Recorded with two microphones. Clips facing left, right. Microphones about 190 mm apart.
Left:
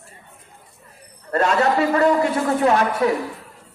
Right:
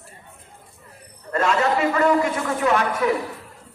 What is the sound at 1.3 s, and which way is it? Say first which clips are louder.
A man's voice: left 2 dB; 35° left (ahead or behind).